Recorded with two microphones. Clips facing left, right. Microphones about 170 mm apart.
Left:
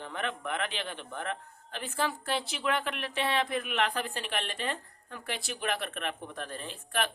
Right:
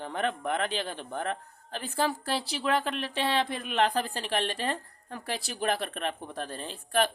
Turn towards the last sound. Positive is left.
turn(degrees=-35)  # may be behind; listen again after turning